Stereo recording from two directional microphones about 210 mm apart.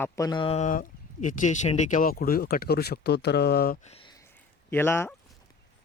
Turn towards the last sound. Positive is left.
turn(degrees=10)  # may be behind; listen again after turning